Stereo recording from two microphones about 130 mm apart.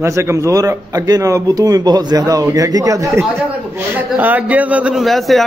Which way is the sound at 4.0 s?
15° right (ahead or behind).